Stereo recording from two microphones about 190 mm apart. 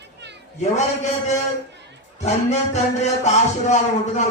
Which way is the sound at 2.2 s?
35° left (ahead or behind).